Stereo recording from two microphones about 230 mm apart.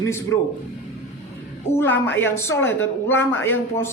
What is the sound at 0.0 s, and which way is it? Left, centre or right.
Speech, centre.